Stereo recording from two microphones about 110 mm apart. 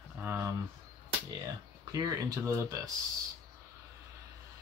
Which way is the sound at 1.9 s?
35° right (ahead or behind).